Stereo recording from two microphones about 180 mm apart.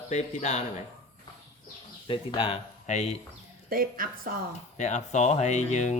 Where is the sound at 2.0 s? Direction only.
30° left (ahead or behind).